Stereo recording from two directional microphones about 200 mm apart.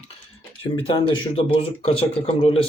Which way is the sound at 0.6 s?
25° left (ahead or behind).